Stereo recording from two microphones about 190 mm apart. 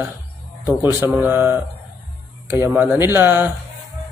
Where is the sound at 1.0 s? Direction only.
10° right (ahead or behind).